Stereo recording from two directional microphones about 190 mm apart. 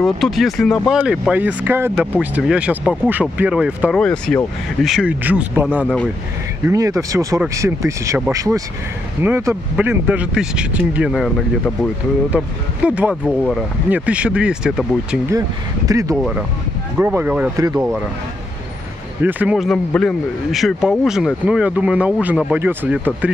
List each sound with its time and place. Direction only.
0.0 s speech: centre (ahead or behind)
15.2 s speech: 20° right (ahead or behind)
16.2 s speech: centre (ahead or behind)
19.2 s speech: 10° right (ahead or behind)